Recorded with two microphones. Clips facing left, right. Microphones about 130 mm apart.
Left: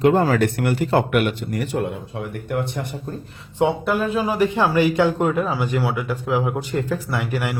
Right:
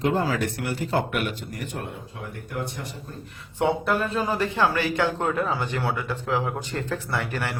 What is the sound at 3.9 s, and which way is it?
A man's voice, 5° left (ahead or behind).